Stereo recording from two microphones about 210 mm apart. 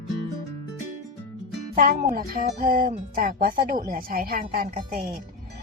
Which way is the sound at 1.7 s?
40° right (ahead or behind).